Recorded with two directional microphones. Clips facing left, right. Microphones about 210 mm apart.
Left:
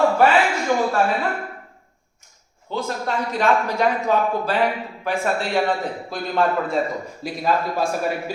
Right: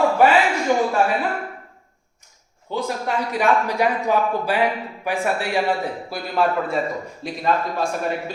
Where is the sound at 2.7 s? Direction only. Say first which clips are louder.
Right 1 dB; 15° right (ahead or behind).